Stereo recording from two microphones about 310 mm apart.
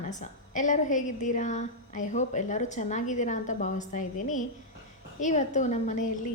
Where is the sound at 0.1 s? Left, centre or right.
Left.